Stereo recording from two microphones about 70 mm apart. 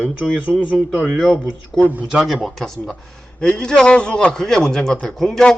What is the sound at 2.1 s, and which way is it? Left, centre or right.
A man's voice, centre.